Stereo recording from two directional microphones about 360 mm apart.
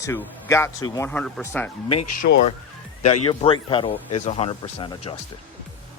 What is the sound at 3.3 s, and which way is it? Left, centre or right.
Speech, centre.